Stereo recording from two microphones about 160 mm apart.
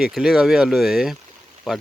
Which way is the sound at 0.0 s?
Centre (ahead or behind).